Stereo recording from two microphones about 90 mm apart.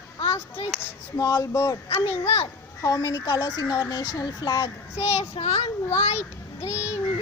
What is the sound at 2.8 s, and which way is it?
Speech, 40° left (ahead or behind).